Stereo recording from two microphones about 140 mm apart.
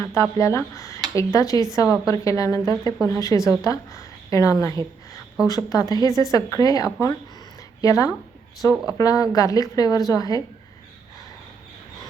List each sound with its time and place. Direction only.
0.0 s a woman's voice: 20° left (ahead or behind)